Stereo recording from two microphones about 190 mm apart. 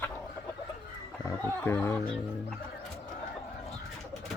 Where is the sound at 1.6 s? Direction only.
10° left (ahead or behind).